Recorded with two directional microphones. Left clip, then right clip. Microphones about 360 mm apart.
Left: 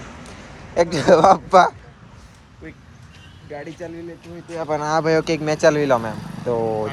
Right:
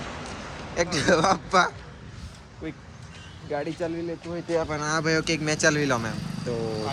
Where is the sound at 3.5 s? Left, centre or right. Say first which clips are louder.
Right 3 dB; centre.